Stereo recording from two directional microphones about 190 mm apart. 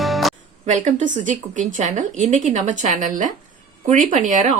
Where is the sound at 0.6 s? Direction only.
40° right (ahead or behind).